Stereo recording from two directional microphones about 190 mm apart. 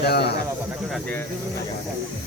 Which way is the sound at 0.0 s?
60° left (ahead or behind).